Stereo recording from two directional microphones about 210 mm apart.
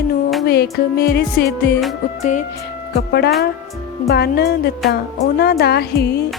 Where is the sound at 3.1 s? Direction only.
50° left (ahead or behind).